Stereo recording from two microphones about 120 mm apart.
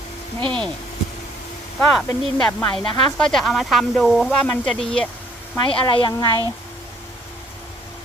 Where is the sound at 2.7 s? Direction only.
5° left (ahead or behind).